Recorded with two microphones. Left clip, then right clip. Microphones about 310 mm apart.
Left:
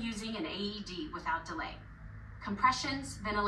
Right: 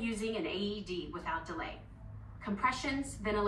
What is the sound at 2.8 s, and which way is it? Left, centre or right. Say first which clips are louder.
Speech: right 1 dB; left.